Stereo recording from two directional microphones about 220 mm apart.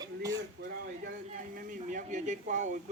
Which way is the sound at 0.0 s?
15° right (ahead or behind).